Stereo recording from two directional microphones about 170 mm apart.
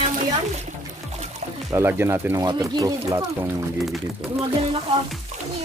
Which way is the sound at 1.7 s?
15° right (ahead or behind).